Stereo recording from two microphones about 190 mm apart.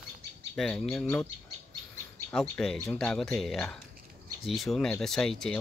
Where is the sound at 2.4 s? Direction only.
5° left (ahead or behind).